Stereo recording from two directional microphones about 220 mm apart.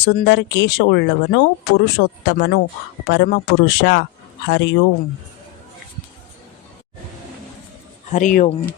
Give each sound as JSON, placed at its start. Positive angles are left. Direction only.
{"t": 0.0, "sound": "speech", "side_deg": 50}
{"t": 8.1, "sound": "speech", "side_deg": 35}